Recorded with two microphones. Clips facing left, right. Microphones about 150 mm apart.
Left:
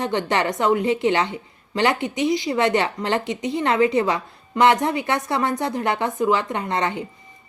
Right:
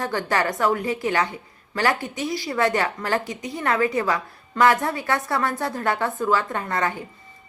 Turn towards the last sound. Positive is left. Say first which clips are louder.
# left 2 dB
turn(degrees=20)  # may be behind; listen again after turning